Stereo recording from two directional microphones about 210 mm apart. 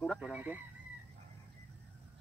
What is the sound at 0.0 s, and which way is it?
Speech, centre (ahead or behind).